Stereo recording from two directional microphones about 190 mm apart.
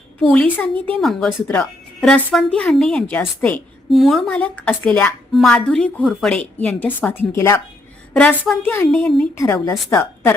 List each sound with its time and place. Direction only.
0.2 s a woman's voice: 5° left (ahead or behind)
9.3 s a woman's voice: 15° left (ahead or behind)